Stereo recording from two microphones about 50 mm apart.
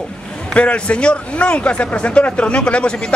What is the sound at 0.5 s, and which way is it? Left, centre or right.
A man's voice, left.